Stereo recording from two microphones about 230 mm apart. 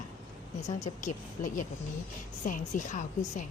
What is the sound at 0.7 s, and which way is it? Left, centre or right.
A woman's voice, left.